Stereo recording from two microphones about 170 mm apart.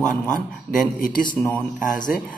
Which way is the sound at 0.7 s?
40° right (ahead or behind).